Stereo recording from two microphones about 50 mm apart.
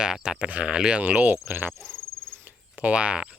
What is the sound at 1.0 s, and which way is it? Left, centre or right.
Cricket, right.